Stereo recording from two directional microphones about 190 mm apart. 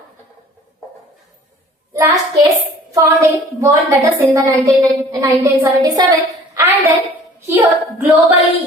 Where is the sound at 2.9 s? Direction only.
15° right (ahead or behind).